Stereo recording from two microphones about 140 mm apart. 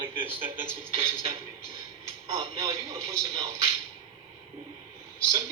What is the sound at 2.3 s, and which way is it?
Speech, 45° right (ahead or behind).